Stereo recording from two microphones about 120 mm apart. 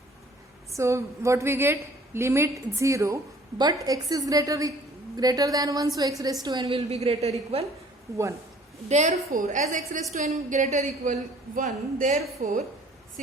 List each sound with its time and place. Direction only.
0.8 s a woman's voice: 25° right (ahead or behind)
6.7 s a woman's voice: 55° right (ahead or behind)
8.9 s a woman's voice: 80° right
10.1 s a woman's voice: 75° right (ahead or behind); by 12.6 s 90° right